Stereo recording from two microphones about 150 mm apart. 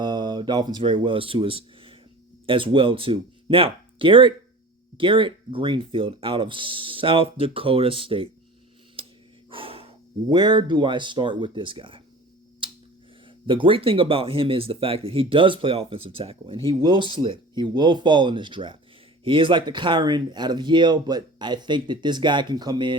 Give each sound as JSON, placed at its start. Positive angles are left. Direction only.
{"t": 0.0, "sound": "speech", "side_deg": -30}
{"t": 9.0, "sound": "a sound", "side_deg": -35}
{"t": 9.5, "sound": "speech", "side_deg": -35}
{"t": 12.6, "sound": "finger snapping", "side_deg": -35}
{"t": 13.2, "sound": "speech", "side_deg": -35}